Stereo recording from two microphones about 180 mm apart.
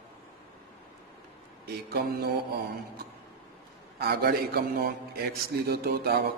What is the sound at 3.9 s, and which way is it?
A man's voice, 60° right (ahead or behind).